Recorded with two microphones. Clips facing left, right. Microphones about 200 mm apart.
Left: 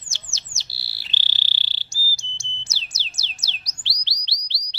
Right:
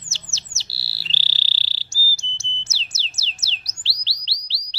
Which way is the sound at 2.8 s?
15° left (ahead or behind).